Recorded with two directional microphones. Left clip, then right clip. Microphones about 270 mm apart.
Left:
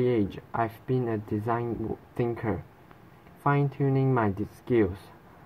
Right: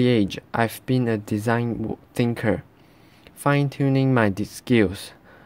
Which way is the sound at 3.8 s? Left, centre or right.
Right.